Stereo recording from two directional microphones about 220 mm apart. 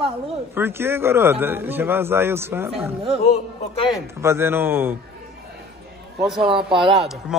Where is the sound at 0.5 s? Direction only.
10° right (ahead or behind).